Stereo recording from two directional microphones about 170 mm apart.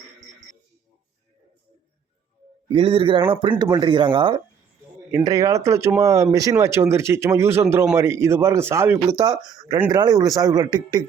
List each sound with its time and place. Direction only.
2.6 s speech: 30° right (ahead or behind)